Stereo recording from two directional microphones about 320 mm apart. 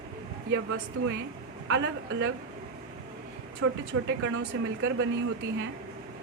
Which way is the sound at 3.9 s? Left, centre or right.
Right.